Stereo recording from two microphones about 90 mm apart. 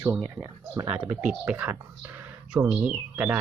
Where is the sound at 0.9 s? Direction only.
15° right (ahead or behind).